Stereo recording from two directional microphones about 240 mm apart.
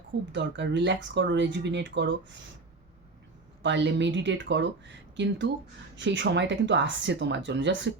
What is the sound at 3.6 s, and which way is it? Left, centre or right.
Speech, right.